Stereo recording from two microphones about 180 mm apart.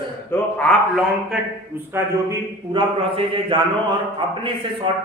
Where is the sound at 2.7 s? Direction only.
25° right (ahead or behind).